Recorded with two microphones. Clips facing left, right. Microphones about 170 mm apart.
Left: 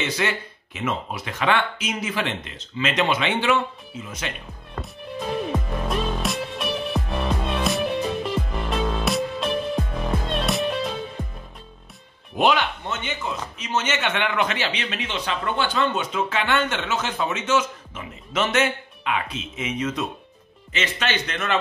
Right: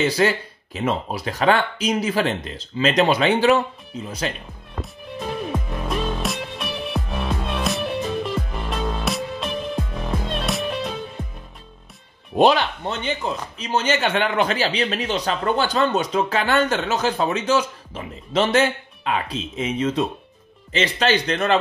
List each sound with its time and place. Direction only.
0.0 s speech: 35° right (ahead or behind)
5.1 s music: centre (ahead or behind)
12.4 s speech: 35° right (ahead or behind)